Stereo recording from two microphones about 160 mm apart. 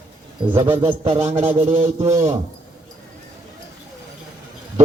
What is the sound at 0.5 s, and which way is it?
Speech, 30° right (ahead or behind).